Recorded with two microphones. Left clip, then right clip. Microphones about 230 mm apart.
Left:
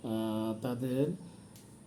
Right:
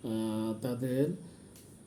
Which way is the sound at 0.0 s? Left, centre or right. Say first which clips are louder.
Even; centre.